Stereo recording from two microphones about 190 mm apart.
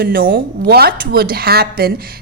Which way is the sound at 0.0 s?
50° right (ahead or behind).